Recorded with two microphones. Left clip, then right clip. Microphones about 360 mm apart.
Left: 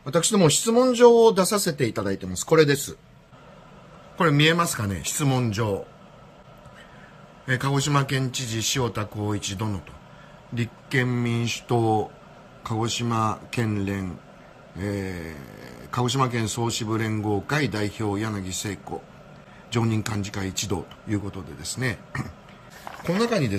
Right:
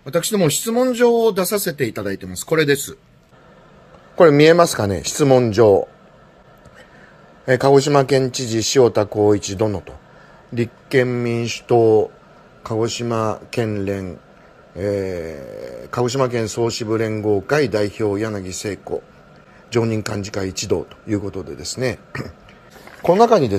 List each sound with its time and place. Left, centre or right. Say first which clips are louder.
0.0 s speech: right 2 dB; centre
4.2 s speech: right 10 dB; centre
7.4 s speech: right 12 dB; centre